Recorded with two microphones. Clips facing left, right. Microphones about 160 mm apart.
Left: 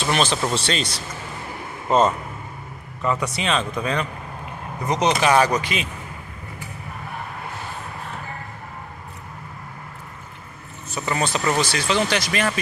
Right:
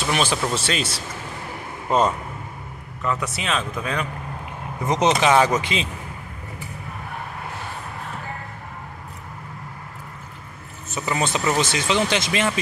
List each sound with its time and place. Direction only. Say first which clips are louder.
0.0 s speech: left 1 dB; 10° right (ahead or behind)
3.0 s a man's voice: left 2 dB; centre (ahead or behind)
4.8 s speech: right 1 dB; 20° right (ahead or behind)
11.1 s speech: even; 20° right (ahead or behind)